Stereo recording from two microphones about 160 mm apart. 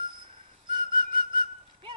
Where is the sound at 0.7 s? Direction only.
30° right (ahead or behind).